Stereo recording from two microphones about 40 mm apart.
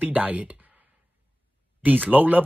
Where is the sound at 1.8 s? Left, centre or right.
Right.